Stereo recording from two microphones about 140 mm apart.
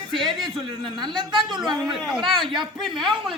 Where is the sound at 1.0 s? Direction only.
35° right (ahead or behind).